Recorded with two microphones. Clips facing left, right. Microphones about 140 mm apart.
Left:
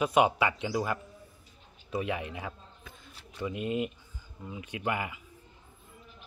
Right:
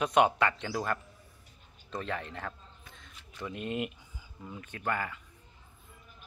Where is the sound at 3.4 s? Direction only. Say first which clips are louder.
Left 3 dB; 5° left (ahead or behind).